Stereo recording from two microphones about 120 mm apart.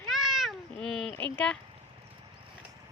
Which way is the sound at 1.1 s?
15° left (ahead or behind).